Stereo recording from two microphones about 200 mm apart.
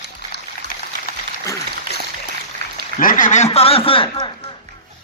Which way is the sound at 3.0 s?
40° left (ahead or behind).